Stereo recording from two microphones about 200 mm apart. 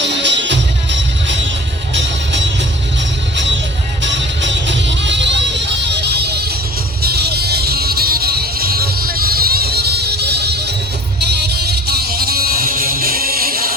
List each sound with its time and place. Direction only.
0.1 s music: 60° right (ahead or behind)
4.0 s music: 65° right (ahead or behind); by 13.7 s 45° right (ahead or behind)